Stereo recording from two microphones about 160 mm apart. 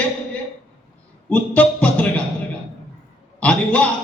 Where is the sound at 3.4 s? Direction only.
5° left (ahead or behind).